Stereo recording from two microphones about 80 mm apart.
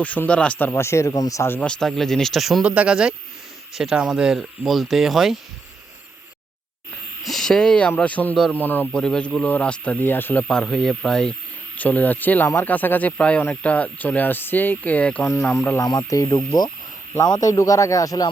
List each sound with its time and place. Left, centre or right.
0.0 s speech: centre
0.7 s speech: left
1.1 s speech: left
1.6 s speech: centre
2.6 s speech: centre
7.3 s speech: centre; by 8.9 s left
8.9 s speech: centre; by 10.4 s left
10.5 s speech: centre
11.8 s speech: centre
15.8 s speech: left
17.5 s speech: left